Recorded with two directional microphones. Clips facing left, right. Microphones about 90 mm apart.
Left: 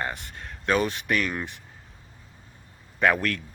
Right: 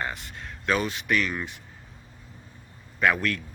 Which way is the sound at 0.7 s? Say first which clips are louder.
Left 1 dB; 45° left (ahead or behind).